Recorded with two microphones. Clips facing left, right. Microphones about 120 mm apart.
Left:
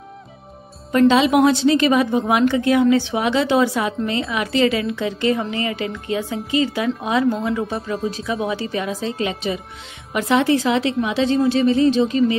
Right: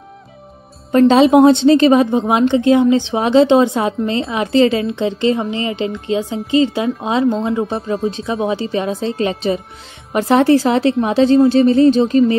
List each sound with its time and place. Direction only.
0.9 s a woman's voice: 30° right (ahead or behind)